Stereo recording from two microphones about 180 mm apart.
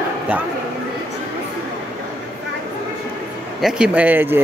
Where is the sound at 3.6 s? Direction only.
5° right (ahead or behind).